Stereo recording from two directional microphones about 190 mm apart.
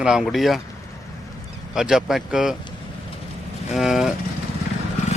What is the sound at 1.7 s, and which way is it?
Speech, centre (ahead or behind).